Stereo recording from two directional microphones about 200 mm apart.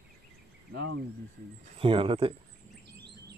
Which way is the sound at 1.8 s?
25° right (ahead or behind).